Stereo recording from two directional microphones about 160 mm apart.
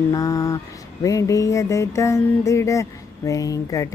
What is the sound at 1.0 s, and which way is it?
Music, 20° left (ahead or behind).